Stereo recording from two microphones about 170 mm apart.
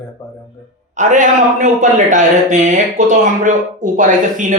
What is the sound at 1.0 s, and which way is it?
A man's voice, 45° right (ahead or behind).